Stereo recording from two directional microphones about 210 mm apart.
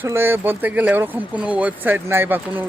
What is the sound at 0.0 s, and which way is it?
Speech, 10° right (ahead or behind).